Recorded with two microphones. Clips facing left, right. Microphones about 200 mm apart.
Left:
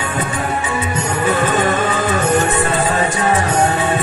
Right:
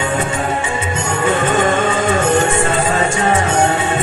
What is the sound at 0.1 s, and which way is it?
Music, 25° right (ahead or behind).